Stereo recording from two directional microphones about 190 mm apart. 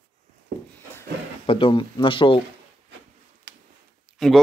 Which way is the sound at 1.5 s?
30° left (ahead or behind).